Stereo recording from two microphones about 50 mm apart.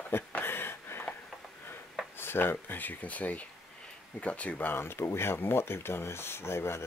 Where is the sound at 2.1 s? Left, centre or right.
Left.